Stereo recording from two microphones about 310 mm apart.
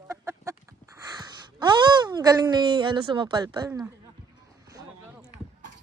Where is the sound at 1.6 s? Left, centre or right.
Centre.